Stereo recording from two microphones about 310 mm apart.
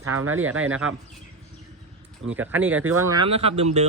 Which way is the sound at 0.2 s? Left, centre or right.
Right.